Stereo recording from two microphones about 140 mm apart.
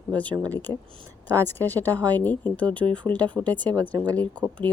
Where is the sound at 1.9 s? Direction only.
25° right (ahead or behind).